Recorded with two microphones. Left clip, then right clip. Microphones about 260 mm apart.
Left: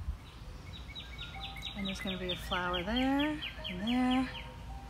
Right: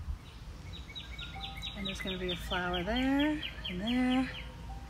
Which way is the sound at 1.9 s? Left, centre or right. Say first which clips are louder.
Right 1 dB; centre.